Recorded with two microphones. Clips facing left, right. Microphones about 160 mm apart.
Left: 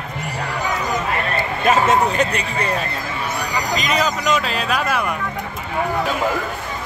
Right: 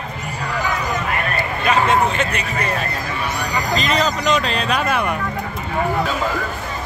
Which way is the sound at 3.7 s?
10° left (ahead or behind).